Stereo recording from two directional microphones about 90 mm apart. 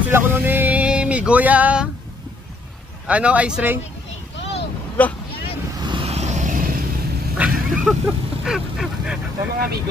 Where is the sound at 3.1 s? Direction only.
15° right (ahead or behind).